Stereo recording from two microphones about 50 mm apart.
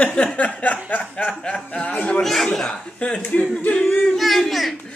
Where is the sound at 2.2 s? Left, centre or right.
Centre.